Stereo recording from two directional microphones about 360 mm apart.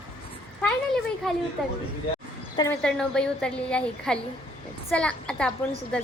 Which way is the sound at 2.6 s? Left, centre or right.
Centre.